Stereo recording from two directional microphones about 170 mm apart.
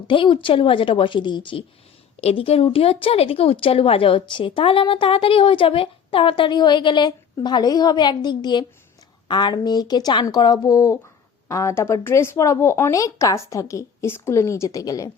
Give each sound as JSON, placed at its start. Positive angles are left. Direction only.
{"t": 0.1, "sound": "speech", "side_deg": 30}